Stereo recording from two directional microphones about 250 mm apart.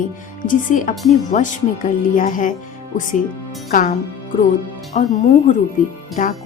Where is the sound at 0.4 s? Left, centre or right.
Left.